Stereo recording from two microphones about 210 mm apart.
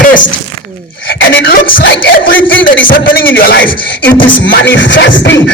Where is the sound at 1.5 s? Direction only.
40° left (ahead or behind).